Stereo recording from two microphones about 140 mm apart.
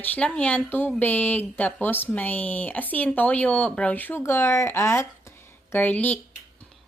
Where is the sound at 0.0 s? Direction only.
10° left (ahead or behind).